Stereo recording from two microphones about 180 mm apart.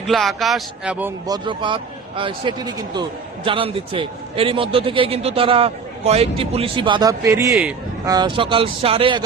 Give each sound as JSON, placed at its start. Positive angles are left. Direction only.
{"t": 0.1, "sound": "a man's voice", "side_deg": 0}
{"t": 1.3, "sound": "a man's voice", "side_deg": -25}